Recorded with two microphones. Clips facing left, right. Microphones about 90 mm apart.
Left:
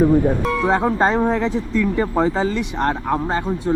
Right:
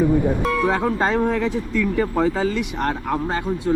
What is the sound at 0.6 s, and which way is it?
Speech, 25° left (ahead or behind).